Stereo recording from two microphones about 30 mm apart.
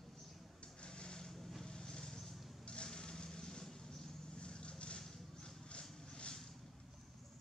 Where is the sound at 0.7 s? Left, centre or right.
Left.